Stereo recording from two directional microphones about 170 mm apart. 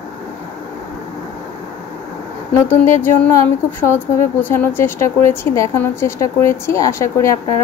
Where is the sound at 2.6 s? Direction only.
15° left (ahead or behind).